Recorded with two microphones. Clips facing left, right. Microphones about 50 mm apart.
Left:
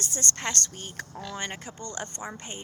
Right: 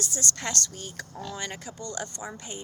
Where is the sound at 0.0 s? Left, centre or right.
Left.